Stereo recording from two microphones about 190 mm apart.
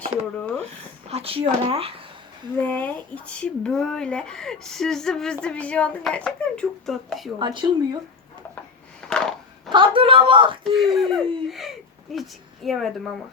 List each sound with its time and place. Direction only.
0.3 s speech: 5° left (ahead or behind)
1.1 s speech: 30° right (ahead or behind)
2.6 s speech: 10° left (ahead or behind)
7.3 s speech: 25° right (ahead or behind)
9.0 s a sound: 5° left (ahead or behind)
9.6 s speech: 25° right (ahead or behind)
10.6 s speech: centre (ahead or behind)